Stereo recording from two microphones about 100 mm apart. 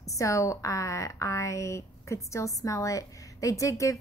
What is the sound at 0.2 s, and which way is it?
A woman's voice, 30° left (ahead or behind).